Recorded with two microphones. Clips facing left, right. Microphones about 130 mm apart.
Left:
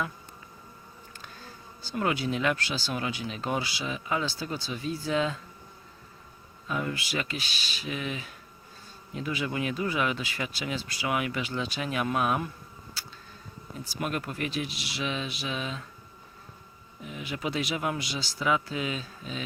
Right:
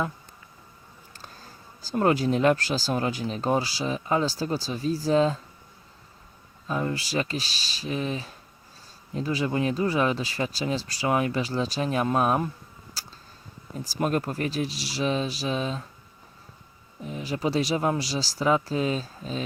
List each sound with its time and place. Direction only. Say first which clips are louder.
1.2 s speech: right 1 dB; 40° right (ahead or behind)
6.7 s speech: right 3 dB; 30° right (ahead or behind)
13.0 s insect: right 2 dB; 40° right (ahead or behind)
13.7 s speech: right 6 dB; 40° right (ahead or behind)
17.0 s speech: right 6 dB; 35° right (ahead or behind)